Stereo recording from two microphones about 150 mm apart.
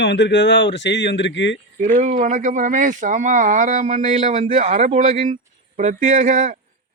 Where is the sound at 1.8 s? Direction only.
55° right (ahead or behind).